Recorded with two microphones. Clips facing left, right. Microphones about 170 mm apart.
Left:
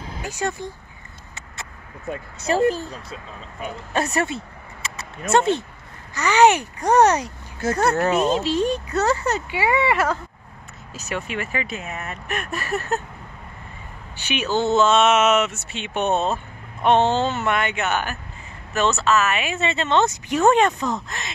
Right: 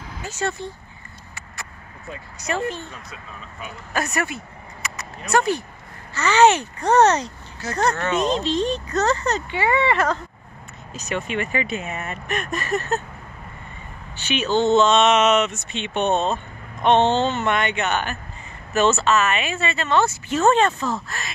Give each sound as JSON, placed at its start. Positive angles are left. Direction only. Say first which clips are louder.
{"t": 0.2, "sound": "speech", "louder": "even", "side_deg": 15}
{"t": 2.4, "sound": "speech", "louder": "left 6 dB", "side_deg": 35}
{"t": 4.8, "sound": "a sound", "louder": "right 1 dB", "side_deg": 25}
{"t": 5.3, "sound": "speech", "louder": "left 2 dB", "side_deg": 25}
{"t": 6.1, "sound": "speech", "louder": "even", "side_deg": 15}
{"t": 14.1, "sound": "speech", "louder": "right 2 dB", "side_deg": 10}
{"t": 19.5, "sound": "speech", "louder": "left 1 dB", "side_deg": 20}